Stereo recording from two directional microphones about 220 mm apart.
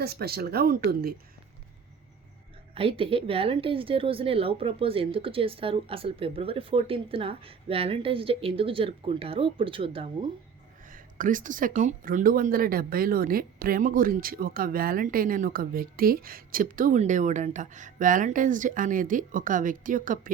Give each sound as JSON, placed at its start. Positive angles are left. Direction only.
{"t": 0.0, "sound": "speech", "side_deg": -45}
{"t": 2.7, "sound": "a woman's voice", "side_deg": -25}
{"t": 10.8, "sound": "speech", "side_deg": -40}